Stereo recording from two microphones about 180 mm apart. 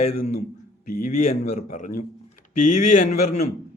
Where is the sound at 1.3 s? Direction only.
40° left (ahead or behind).